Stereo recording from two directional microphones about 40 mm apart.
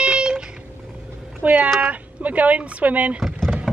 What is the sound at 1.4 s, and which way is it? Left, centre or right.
Speech, right.